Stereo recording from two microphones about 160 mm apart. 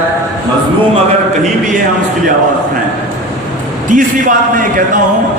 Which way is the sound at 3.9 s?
55° right (ahead or behind).